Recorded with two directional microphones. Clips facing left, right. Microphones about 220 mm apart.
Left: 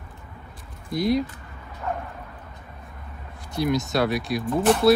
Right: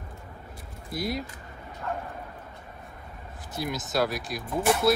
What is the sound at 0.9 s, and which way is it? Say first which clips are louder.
Speech: left 9 dB; centre (ahead or behind).